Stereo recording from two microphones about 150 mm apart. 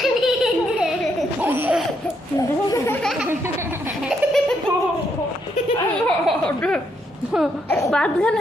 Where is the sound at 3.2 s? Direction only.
15° right (ahead or behind).